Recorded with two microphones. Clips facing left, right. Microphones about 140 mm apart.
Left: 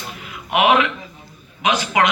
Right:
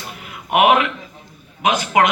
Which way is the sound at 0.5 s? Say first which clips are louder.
Right 1 dB; 50° right (ahead or behind).